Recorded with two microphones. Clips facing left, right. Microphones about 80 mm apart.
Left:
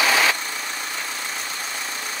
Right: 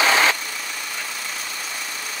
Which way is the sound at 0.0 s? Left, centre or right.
Right.